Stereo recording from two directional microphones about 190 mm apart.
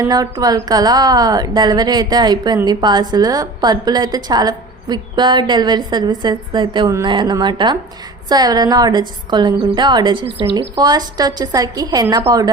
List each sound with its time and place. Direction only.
0.1 s a woman's voice: 20° right (ahead or behind)